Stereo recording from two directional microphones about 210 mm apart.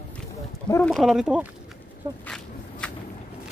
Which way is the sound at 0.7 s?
5° left (ahead or behind).